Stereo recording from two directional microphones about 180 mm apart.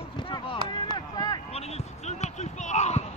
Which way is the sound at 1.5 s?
35° left (ahead or behind).